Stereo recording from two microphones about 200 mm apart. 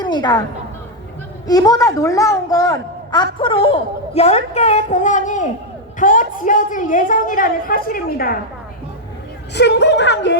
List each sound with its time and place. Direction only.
0.0 s a woman's voice: 20° left (ahead or behind)
1.5 s a man's voice: 20° left (ahead or behind); by 8.4 s 45° left (ahead or behind)
9.6 s speech: 60° left (ahead or behind)